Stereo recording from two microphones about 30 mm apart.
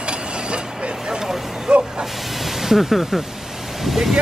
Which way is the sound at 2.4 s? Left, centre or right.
Centre.